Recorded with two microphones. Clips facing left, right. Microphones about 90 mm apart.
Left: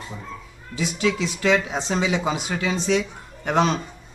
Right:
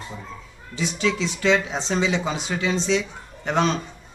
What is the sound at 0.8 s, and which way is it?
Speech, 10° left (ahead or behind).